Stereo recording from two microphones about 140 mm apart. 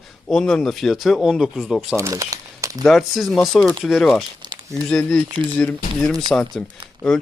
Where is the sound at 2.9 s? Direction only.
Centre (ahead or behind).